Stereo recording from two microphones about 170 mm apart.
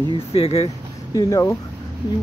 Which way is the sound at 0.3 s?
35° left (ahead or behind).